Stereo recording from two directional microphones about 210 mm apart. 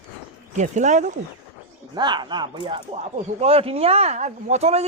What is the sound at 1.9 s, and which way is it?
Speech, 20° right (ahead or behind).